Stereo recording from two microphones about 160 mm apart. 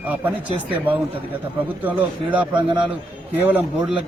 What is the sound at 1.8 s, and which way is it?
Speech, 10° right (ahead or behind).